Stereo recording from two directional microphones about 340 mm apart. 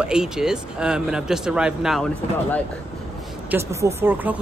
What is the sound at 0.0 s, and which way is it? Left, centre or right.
Speech, centre.